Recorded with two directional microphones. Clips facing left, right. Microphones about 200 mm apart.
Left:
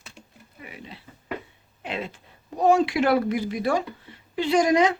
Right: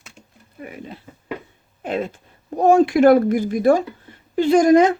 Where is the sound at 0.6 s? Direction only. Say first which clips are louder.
Right 7 dB; 45° right (ahead or behind).